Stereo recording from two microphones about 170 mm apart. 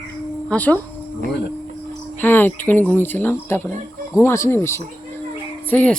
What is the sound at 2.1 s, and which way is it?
A woman's voice, 10° left (ahead or behind).